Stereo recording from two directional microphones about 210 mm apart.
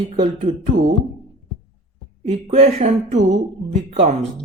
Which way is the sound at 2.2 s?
30° right (ahead or behind).